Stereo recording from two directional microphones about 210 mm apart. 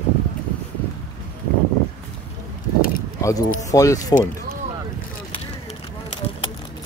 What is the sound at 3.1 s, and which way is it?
Keys jangling, 15° left (ahead or behind).